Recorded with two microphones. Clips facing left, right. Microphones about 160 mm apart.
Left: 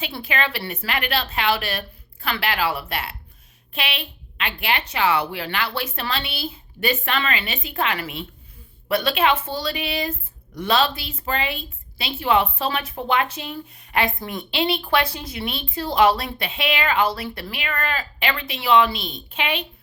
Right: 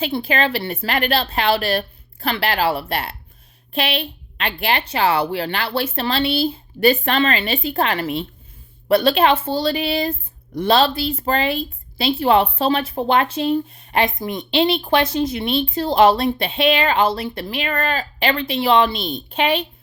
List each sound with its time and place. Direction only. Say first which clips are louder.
0.0 s speech: right 6 dB; 30° right (ahead or behind)